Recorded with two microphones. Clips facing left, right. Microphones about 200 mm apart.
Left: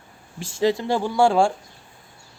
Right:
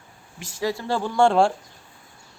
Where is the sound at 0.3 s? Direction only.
25° left (ahead or behind).